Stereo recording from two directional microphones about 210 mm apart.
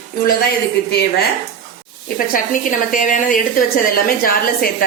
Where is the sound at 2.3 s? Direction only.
40° left (ahead or behind).